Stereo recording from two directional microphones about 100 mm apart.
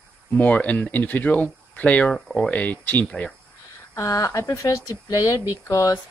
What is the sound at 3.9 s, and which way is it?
Speech, 35° left (ahead or behind).